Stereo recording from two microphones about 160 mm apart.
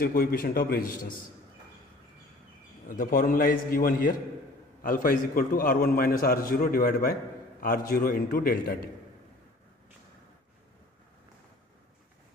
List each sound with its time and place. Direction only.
0.0 s a man's voice: 70° left (ahead or behind)
2.9 s a man's voice: 60° left (ahead or behind)